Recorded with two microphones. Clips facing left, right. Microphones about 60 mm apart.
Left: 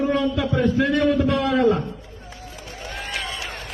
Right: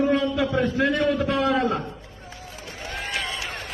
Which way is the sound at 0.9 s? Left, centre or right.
Centre.